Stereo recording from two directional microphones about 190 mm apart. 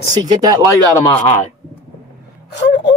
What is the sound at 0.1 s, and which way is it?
Speech, 20° right (ahead or behind).